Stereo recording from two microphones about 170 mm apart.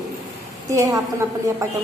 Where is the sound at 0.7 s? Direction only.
15° right (ahead or behind).